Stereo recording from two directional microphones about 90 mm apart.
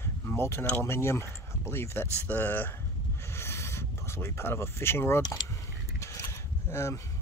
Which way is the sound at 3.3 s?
30° left (ahead or behind).